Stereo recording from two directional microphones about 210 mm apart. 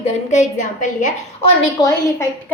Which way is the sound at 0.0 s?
35° left (ahead or behind).